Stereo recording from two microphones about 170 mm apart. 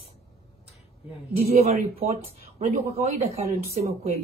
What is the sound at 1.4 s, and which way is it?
Speech, 40° right (ahead or behind).